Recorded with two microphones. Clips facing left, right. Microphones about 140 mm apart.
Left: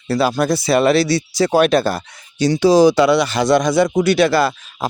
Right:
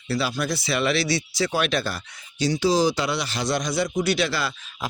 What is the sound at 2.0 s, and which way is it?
Speech, 70° left (ahead or behind).